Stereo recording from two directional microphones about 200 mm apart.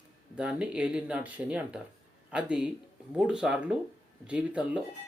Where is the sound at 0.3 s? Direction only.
5° right (ahead or behind).